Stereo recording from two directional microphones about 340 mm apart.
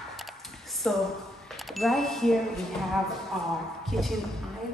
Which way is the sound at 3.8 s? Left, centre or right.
Centre.